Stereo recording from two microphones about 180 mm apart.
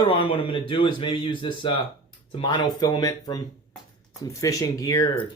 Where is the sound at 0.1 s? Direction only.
30° left (ahead or behind).